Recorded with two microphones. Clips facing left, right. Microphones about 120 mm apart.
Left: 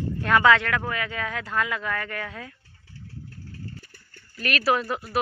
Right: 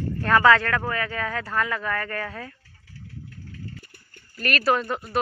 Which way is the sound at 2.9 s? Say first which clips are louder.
Even; 30° left (ahead or behind).